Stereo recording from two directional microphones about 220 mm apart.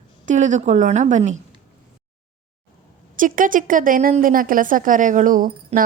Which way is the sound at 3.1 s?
35° right (ahead or behind).